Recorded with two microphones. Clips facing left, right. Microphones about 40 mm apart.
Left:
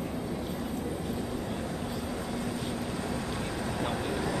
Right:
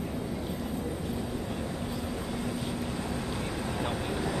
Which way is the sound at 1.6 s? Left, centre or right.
Centre.